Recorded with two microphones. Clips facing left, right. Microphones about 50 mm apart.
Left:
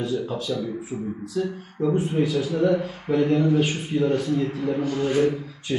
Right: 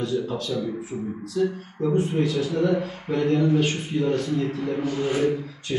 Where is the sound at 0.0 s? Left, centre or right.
Centre.